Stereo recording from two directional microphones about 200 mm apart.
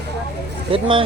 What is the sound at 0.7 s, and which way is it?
Speech, 25° right (ahead or behind).